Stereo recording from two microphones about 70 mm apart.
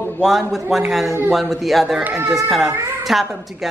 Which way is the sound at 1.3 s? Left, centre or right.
Centre.